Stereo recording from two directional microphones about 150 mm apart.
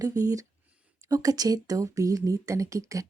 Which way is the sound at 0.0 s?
25° right (ahead or behind).